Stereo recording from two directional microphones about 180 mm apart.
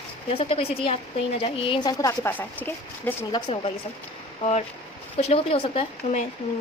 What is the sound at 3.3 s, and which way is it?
Speech, 30° left (ahead or behind).